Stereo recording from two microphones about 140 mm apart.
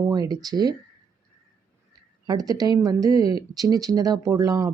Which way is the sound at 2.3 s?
25° right (ahead or behind).